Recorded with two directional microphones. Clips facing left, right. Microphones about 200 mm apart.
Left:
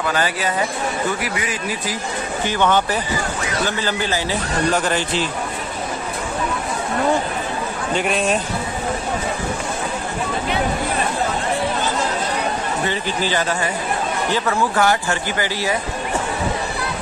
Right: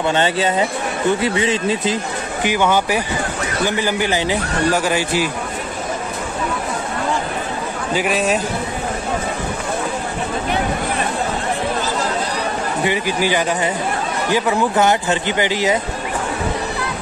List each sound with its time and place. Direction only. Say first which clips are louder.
0.0 s a man's voice: right 4 dB; 25° right (ahead or behind)
2.4 s speech: right 2 dB; 10° right (ahead or behind)
7.9 s a man's voice: right 2 dB; 5° right (ahead or behind)
12.8 s a man's voice: right 6 dB; 10° right (ahead or behind)